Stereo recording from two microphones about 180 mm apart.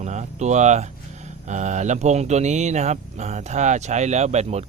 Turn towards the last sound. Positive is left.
turn(degrees=-35)  # may be behind; listen again after turning